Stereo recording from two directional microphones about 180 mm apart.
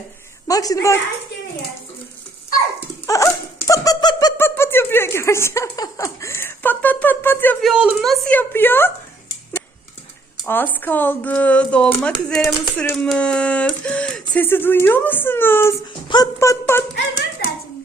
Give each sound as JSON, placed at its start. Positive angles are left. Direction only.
{"t": 0.4, "sound": "a woman's voice", "side_deg": 20}
{"t": 3.1, "sound": "a sound", "side_deg": 15}
{"t": 7.6, "sound": "a woman's voice", "side_deg": -5}
{"t": 10.4, "sound": "speech", "side_deg": 10}
{"t": 16.0, "sound": "speech", "side_deg": 20}